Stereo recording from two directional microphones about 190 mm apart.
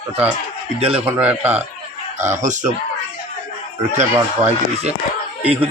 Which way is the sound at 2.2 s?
40° right (ahead or behind).